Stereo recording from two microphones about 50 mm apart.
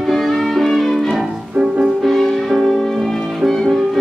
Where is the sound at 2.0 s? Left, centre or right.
Centre.